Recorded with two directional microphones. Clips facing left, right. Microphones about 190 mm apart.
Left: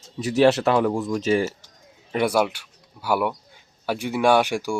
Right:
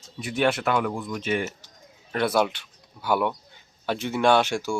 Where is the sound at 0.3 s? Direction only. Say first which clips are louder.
Left 6 dB; 35° left (ahead or behind).